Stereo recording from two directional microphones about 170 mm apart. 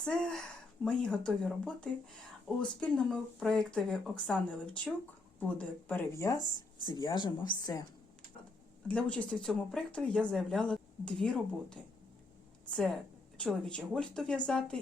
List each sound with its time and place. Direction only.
0.0 s speech: 5° left (ahead or behind); by 7.3 s 25° left (ahead or behind)
8.9 s speech: 5° left (ahead or behind)